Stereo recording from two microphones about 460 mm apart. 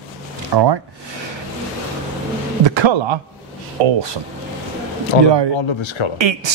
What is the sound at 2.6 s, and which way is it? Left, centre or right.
Speech, right.